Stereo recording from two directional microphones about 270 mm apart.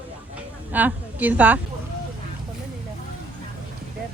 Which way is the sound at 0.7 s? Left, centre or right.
Centre.